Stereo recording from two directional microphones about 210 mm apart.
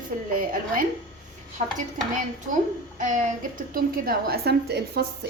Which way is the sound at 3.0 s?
40° right (ahead or behind).